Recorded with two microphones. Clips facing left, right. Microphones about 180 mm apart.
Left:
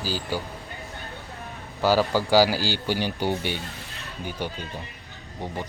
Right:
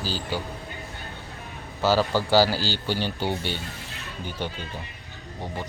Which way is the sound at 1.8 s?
15° left (ahead or behind).